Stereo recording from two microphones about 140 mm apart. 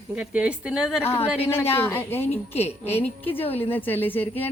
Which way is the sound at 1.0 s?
15° left (ahead or behind).